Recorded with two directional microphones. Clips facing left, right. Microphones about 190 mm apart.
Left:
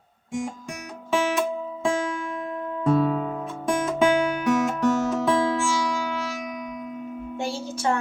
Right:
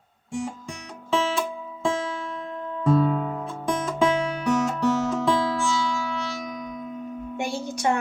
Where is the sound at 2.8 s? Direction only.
Centre (ahead or behind).